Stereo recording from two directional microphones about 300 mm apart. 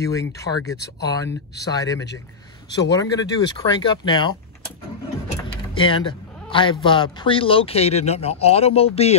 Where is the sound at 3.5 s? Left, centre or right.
Centre.